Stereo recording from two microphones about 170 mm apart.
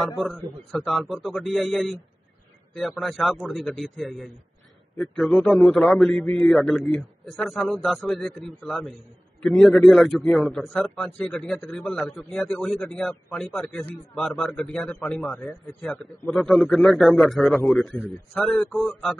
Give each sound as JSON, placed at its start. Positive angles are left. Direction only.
{"t": 0.7, "sound": "a man's voice", "side_deg": 0}